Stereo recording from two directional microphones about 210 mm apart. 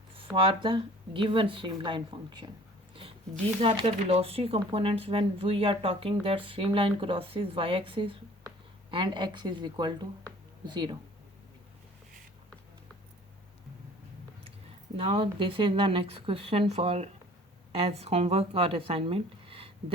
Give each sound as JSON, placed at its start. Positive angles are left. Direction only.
{"t": 0.3, "sound": "speech", "side_deg": -25}
{"t": 3.6, "sound": "speech", "side_deg": -25}
{"t": 14.9, "sound": "speech", "side_deg": -25}